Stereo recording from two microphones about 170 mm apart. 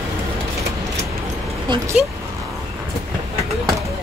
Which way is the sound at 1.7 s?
25° right (ahead or behind).